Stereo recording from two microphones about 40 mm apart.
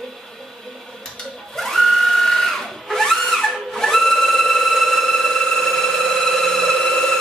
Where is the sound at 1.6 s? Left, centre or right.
Centre.